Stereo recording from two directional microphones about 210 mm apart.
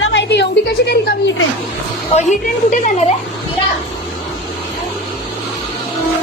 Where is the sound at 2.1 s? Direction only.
35° left (ahead or behind).